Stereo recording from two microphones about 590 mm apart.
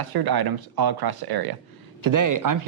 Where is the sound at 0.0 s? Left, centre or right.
Right.